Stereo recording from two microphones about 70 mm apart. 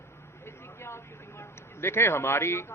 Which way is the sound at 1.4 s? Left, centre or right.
Left.